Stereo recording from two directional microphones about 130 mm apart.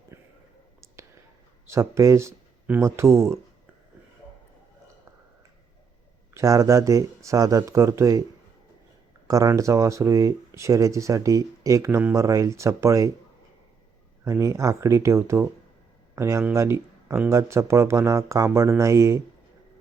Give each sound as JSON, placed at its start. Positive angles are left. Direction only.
{"t": 0.1, "sound": "a sound", "side_deg": -20}
{"t": 1.6, "sound": "speech", "side_deg": -20}
{"t": 6.3, "sound": "speech", "side_deg": -25}
{"t": 9.2, "sound": "speech", "side_deg": -25}
{"t": 14.3, "sound": "speech", "side_deg": -25}